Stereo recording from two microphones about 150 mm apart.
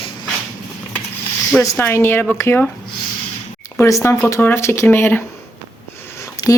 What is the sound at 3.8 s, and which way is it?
Speech, 20° left (ahead or behind).